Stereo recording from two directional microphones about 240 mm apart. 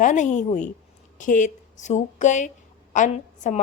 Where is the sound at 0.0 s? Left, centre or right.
Left.